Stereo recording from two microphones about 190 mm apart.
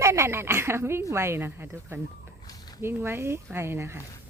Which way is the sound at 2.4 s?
20° left (ahead or behind).